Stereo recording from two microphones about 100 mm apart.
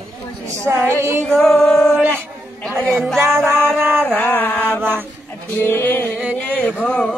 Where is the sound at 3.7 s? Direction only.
20° right (ahead or behind).